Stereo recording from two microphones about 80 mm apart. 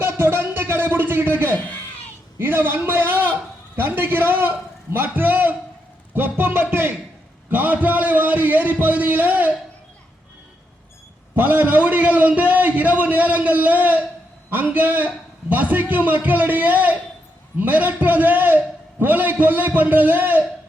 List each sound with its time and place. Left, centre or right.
0.0 s music: right
2.4 s a man's voice: right
11.3 s a man's voice: right